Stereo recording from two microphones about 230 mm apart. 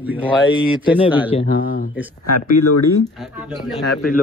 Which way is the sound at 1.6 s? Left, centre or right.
Left.